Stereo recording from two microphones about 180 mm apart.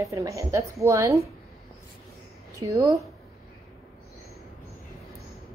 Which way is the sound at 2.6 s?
15° right (ahead or behind).